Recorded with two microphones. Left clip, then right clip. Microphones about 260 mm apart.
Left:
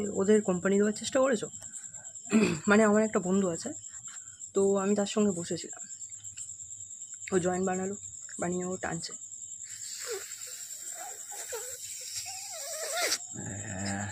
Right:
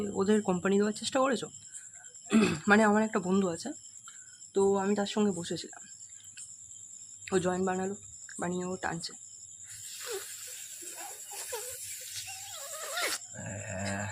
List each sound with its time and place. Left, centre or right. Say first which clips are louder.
0.0 s speech: left 3 dB; centre
7.3 s speech: left 1 dB; centre
12.8 s horse: left 2 dB; centre
13.6 s dog: right 1 dB; right